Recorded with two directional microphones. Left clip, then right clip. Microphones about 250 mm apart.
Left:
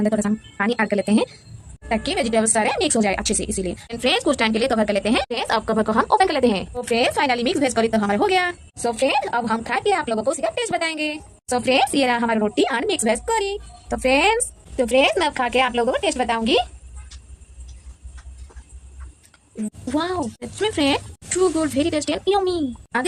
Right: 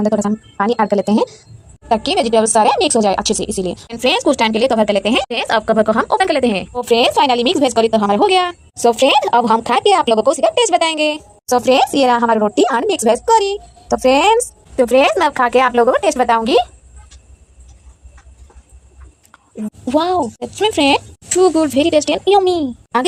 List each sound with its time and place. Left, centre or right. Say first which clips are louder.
0.0 s speech: right 5 dB; centre
19.6 s speech: right 8 dB; centre